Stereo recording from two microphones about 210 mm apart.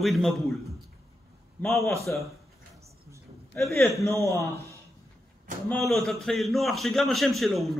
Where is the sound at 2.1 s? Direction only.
10° left (ahead or behind).